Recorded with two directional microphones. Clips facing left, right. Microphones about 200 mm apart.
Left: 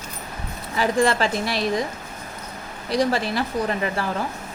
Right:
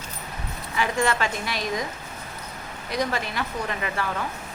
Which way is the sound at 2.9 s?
35° left (ahead or behind).